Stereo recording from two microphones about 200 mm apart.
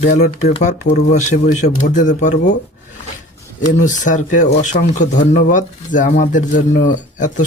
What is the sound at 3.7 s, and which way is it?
Speech, 40° left (ahead or behind).